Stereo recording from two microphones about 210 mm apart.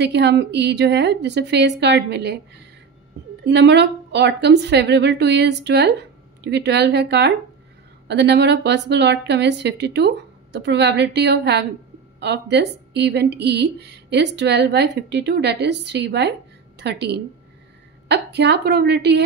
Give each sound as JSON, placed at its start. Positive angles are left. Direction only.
{"t": 0.0, "sound": "a woman's voice", "side_deg": -55}